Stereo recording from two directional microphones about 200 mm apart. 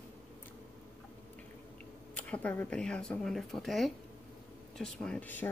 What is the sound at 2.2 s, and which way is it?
Speech, 5° left (ahead or behind).